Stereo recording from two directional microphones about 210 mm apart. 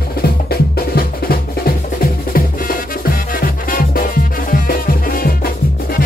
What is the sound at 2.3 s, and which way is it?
Music, 45° left (ahead or behind).